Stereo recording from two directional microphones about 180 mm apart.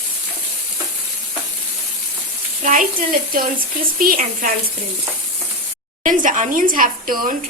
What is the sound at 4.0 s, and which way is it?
Speech, 50° right (ahead or behind).